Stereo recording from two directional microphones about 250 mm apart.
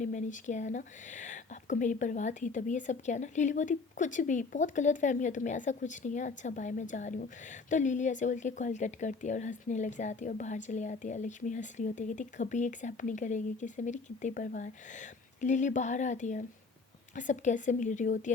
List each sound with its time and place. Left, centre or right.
0.0 s a woman's voice: left